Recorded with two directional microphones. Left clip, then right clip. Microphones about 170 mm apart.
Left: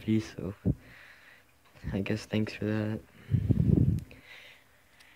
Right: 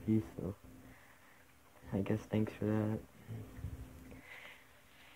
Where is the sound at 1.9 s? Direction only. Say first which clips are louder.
Left 4 dB; 25° left (ahead or behind).